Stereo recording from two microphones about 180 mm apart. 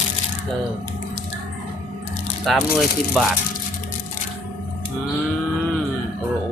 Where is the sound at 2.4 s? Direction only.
Centre (ahead or behind).